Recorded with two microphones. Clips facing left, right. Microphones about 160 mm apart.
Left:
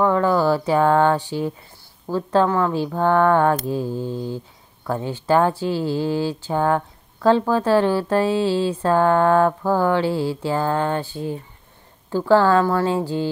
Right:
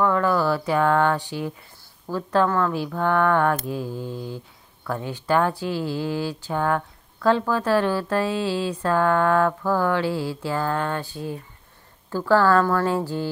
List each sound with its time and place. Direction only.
0.0 s speech: 25° left (ahead or behind)